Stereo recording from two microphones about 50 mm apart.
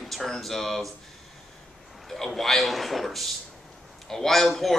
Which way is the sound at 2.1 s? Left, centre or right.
Centre.